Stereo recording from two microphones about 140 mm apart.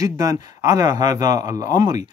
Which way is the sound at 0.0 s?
25° right (ahead or behind).